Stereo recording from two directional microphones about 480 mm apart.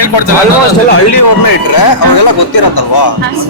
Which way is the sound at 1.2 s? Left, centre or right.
Left.